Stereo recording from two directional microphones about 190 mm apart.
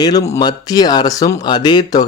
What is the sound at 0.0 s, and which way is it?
Speech, 20° left (ahead or behind).